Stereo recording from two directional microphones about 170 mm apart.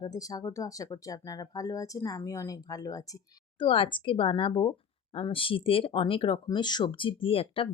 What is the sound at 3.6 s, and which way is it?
Speech, 30° left (ahead or behind).